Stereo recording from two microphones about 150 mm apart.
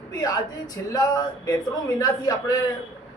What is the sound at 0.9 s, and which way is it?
Speech, 25° left (ahead or behind).